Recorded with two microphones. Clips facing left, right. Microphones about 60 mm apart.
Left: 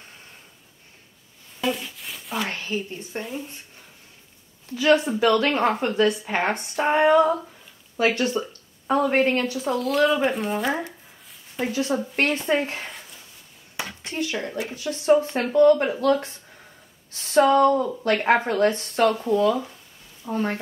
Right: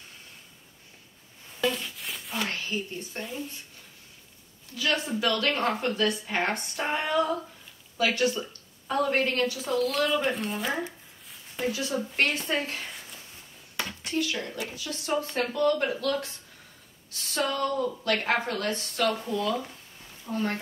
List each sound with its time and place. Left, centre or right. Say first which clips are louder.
1.6 s a sound: left 2 dB; centre
2.5 s speech: left 3 dB; left
4.7 s speech: left 9 dB; left
6.8 s speech: left 10 dB; left
8.0 s a sound: left 4 dB; left
8.9 s speech: left 5 dB; left
10.3 s speech: left 6 dB; centre
11.6 s speech: left 5 dB; left
14.0 s speech: left 2 dB; left
19.2 s speech: left 8 dB; left